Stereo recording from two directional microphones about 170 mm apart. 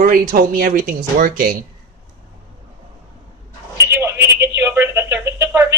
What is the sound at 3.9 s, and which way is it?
Telephone, 15° right (ahead or behind).